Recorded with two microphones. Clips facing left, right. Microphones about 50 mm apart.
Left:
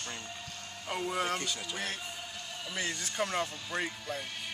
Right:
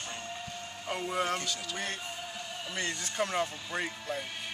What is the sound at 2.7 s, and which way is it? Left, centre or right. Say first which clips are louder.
Speech: even; centre.